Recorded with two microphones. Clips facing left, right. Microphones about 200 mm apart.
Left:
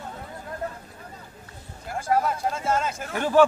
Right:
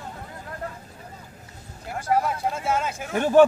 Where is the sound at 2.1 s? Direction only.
10° right (ahead or behind).